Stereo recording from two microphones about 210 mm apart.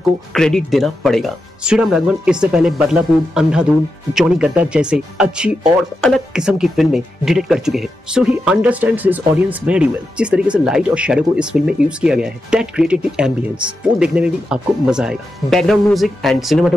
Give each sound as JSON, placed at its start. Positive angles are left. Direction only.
{"t": 0.3, "sound": "speech", "side_deg": 0}